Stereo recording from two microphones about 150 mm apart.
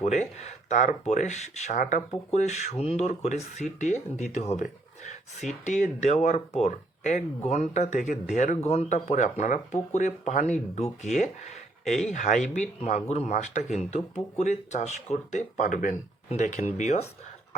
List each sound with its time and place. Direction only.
0.0 s speech: 50° left (ahead or behind)